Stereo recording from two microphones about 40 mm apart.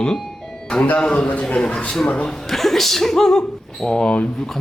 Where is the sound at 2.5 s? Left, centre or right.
Centre.